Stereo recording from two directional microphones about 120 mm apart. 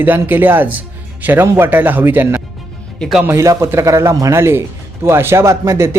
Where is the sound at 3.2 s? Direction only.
25° right (ahead or behind).